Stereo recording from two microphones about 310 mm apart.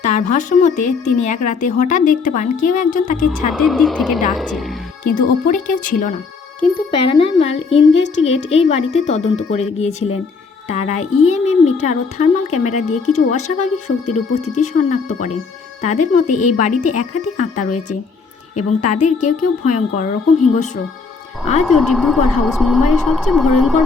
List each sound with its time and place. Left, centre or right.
0.1 s a child's voice: left
3.5 s a woman's voice: centre
5.0 s a child's voice: left
16.2 s a woman's voice: left
16.6 s a child's voice: left
19.0 s a child's voice: left
21.6 s a woman's voice: centre